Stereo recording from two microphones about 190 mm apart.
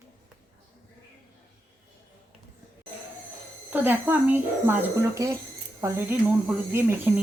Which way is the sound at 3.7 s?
10° right (ahead or behind).